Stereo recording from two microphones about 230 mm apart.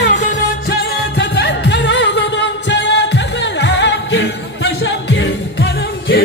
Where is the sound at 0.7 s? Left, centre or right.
Left.